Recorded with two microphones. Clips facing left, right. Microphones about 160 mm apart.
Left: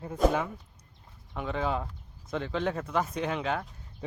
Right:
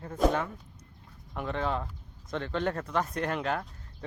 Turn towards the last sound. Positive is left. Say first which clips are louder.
# even
turn(degrees=0)  # may be behind; listen again after turning